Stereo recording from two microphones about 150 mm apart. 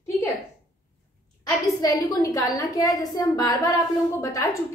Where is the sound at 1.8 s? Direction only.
25° left (ahead or behind).